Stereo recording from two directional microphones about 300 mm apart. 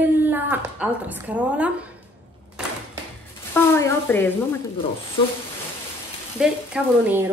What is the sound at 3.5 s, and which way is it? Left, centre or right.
Speech, centre.